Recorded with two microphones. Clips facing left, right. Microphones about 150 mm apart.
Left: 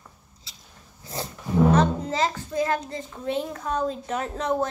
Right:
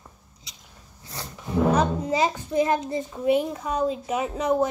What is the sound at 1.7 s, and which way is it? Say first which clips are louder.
A child's voice: left 1 dB; 10° right (ahead or behind).